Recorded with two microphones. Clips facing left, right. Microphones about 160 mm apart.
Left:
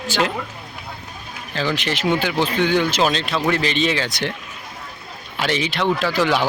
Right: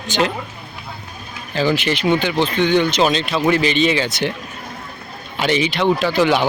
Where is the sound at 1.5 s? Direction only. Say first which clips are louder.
Right 5 dB; 5° right (ahead or behind).